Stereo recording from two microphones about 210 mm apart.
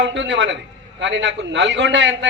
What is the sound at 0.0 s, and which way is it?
A man's voice, 60° right (ahead or behind).